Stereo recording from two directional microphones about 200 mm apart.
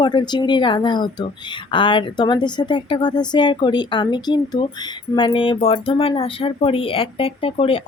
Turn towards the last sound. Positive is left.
turn(degrees=25)  # may be behind; listen again after turning